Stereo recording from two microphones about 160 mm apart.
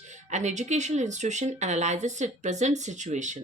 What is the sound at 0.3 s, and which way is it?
Speech, 45° right (ahead or behind).